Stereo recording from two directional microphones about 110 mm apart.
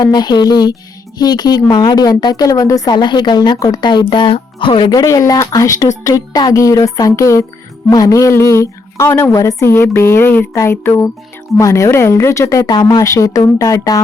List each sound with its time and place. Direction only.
0.0 s a woman's voice: 40° left (ahead or behind)
4.9 s a woman's voice: 30° left (ahead or behind)